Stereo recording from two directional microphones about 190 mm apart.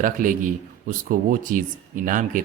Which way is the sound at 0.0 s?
45° right (ahead or behind).